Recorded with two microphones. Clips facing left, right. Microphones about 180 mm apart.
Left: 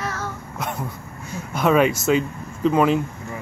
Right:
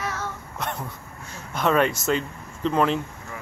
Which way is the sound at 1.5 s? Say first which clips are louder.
Left 4 dB; 5° left (ahead or behind).